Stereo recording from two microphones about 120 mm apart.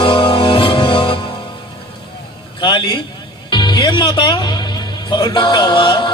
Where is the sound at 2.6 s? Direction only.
45° left (ahead or behind).